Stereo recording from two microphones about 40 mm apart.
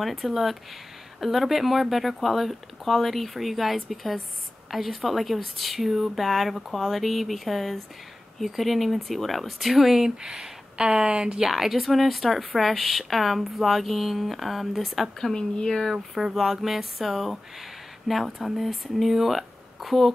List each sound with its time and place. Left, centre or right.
0.0 s speech: centre
10.0 s speech: centre
11.3 s speech: centre
15.3 s speech: centre
16.3 s speech: centre